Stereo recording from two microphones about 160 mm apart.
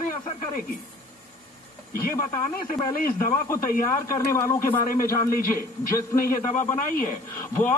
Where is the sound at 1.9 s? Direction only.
65° left (ahead or behind).